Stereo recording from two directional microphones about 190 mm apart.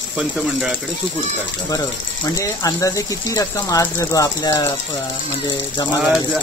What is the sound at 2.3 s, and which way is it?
Speech, 15° left (ahead or behind).